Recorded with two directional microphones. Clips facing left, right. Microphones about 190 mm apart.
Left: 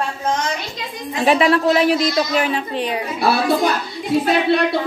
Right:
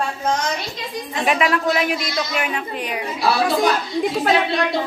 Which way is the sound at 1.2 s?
30° left (ahead or behind).